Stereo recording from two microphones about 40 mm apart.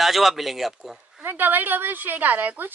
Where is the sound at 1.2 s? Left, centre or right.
Right.